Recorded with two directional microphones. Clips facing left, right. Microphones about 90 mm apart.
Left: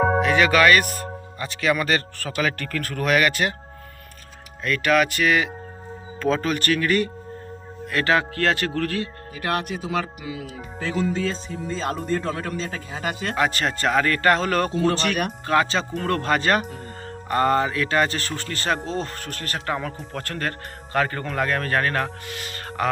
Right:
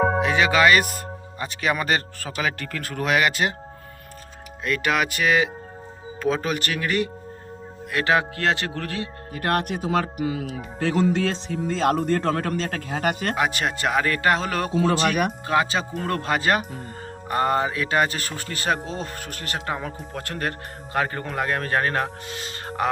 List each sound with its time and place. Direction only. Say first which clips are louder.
0.2 s speech: left 1 dB; 20° right (ahead or behind)
4.6 s speech: left 3 dB; 20° right (ahead or behind)
9.3 s speech: right 2 dB; 50° right (ahead or behind)
10.8 s a man's voice: right 3 dB; 65° right (ahead or behind)
13.3 s speech: left 1 dB; 10° right (ahead or behind)